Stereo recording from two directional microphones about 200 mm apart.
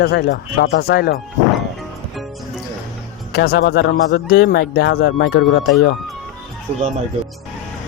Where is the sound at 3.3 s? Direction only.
50° left (ahead or behind).